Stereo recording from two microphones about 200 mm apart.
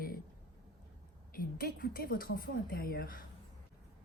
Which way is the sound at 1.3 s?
45° left (ahead or behind).